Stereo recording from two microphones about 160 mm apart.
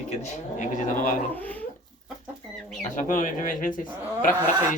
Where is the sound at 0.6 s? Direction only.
50° left (ahead or behind).